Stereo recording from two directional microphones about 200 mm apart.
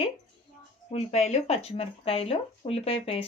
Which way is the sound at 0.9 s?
35° left (ahead or behind).